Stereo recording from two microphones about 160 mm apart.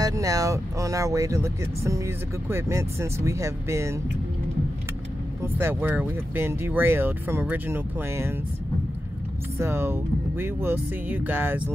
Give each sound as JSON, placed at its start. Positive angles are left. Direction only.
{"t": 0.0, "sound": "speech", "side_deg": -20}
{"t": 5.4, "sound": "speech", "side_deg": -15}
{"t": 9.6, "sound": "speech", "side_deg": -15}